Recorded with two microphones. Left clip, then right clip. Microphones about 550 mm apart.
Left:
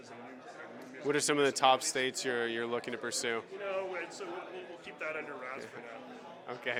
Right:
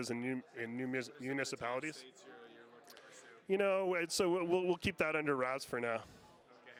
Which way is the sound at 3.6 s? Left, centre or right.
Right.